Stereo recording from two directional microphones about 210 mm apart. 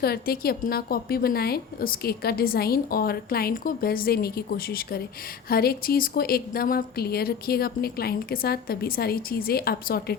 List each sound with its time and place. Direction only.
0.0 s a woman's voice: 45° left (ahead or behind)